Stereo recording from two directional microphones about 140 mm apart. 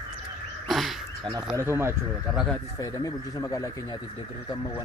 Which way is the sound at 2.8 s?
25° left (ahead or behind).